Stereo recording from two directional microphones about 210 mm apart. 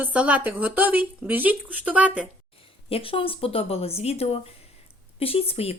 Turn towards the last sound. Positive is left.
turn(degrees=30)  # may be behind; listen again after turning